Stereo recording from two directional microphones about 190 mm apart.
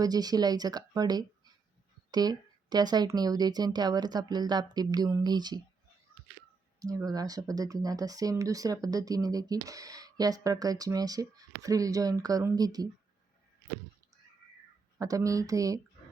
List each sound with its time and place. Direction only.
0.0 s speech: 20° right (ahead or behind)
6.8 s speech: 20° right (ahead or behind)
14.9 s speech: 15° right (ahead or behind)